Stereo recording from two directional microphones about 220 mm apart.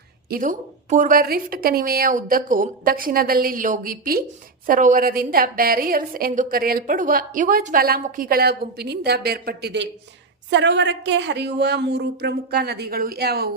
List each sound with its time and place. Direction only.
0.3 s a woman's voice: 40° right (ahead or behind)